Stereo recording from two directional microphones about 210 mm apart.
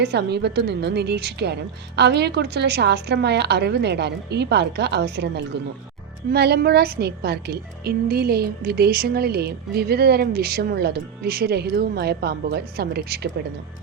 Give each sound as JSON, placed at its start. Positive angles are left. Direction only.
{"t": 0.0, "sound": "a woman's voice", "side_deg": -50}